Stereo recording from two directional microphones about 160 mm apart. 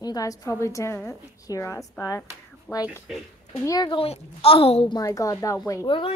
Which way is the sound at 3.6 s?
25° left (ahead or behind).